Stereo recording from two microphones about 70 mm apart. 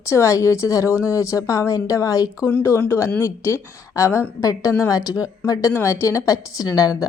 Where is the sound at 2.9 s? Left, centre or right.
Left.